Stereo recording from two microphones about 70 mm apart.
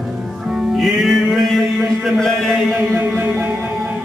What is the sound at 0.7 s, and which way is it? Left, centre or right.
Music, centre.